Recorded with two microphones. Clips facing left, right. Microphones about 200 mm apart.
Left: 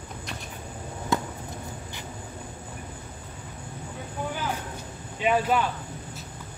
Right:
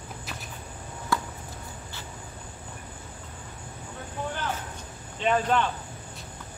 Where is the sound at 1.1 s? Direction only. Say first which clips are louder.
Left 2 dB; 20° left (ahead or behind).